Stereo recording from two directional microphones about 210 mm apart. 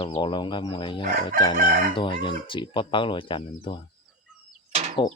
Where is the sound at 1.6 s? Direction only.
40° right (ahead or behind).